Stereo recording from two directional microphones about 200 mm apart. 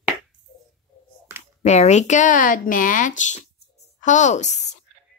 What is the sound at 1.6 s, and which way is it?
A woman's voice, 35° left (ahead or behind).